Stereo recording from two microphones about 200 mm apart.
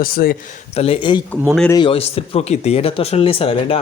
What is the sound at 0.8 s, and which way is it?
Speech, 25° left (ahead or behind).